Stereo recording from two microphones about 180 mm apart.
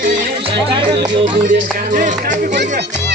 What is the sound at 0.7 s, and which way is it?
Music, 25° right (ahead or behind).